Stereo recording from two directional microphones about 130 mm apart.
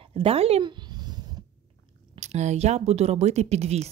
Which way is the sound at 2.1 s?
60° right (ahead or behind).